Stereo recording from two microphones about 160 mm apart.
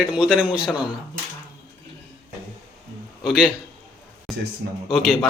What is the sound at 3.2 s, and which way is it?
Speech, 5° right (ahead or behind).